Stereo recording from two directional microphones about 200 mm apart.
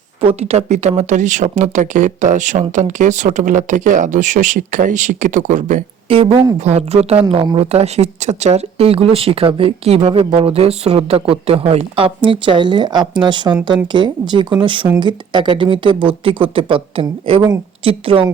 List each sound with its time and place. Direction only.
0.2 s speech: 30° right (ahead or behind)
6.1 s speech: 25° right (ahead or behind)